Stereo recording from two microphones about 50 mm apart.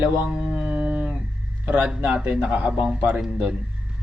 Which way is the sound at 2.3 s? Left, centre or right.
Right.